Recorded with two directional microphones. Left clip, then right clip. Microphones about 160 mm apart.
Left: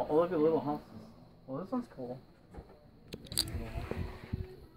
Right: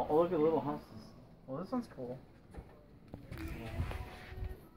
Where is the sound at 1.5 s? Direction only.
20° right (ahead or behind).